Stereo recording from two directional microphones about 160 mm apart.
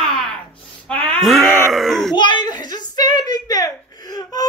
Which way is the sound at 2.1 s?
30° left (ahead or behind).